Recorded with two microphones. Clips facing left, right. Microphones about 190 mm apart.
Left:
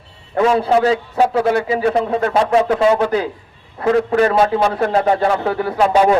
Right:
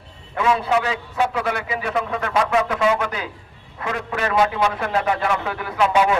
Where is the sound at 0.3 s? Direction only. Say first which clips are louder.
Left 6 dB; 40° left (ahead or behind).